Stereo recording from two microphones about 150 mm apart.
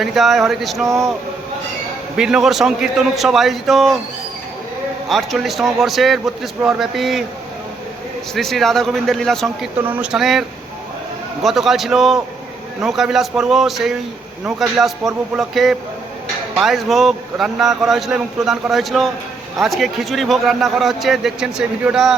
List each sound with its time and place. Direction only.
0.0 s a man's voice: centre (ahead or behind)
0.9 s speech: 20° right (ahead or behind)
2.1 s a man's voice: 5° right (ahead or behind)
5.0 s a man's voice: centre (ahead or behind)
8.4 s a man's voice: centre (ahead or behind)
9.8 s a man's voice: 10° right (ahead or behind)
11.4 s a man's voice: centre (ahead or behind)